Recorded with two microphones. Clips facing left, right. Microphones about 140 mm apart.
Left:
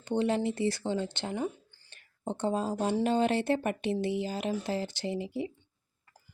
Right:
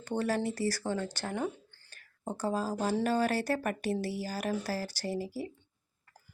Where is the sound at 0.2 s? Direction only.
20° left (ahead or behind).